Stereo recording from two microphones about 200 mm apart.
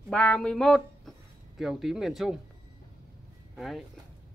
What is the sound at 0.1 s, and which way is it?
Speech, 5° left (ahead or behind).